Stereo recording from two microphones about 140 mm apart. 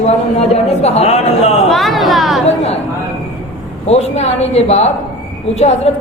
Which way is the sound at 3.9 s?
50° left (ahead or behind).